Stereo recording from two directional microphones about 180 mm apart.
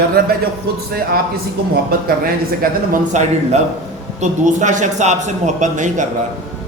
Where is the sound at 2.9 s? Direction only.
40° right (ahead or behind).